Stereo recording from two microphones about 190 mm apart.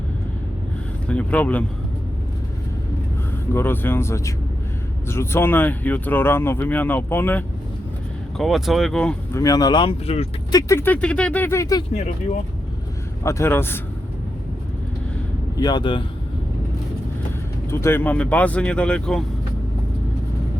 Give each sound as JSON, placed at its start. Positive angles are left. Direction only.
{"t": 1.0, "sound": "speech", "side_deg": 5}
{"t": 3.5, "sound": "speech", "side_deg": 10}
{"t": 8.4, "sound": "speech", "side_deg": 0}
{"t": 9.4, "sound": "speech", "side_deg": 20}
{"t": 10.5, "sound": "speech", "side_deg": 15}
{"t": 11.9, "sound": "speech", "side_deg": 40}
{"t": 13.2, "sound": "speech", "side_deg": 10}
{"t": 15.5, "sound": "speech", "side_deg": 20}
{"t": 17.7, "sound": "speech", "side_deg": 15}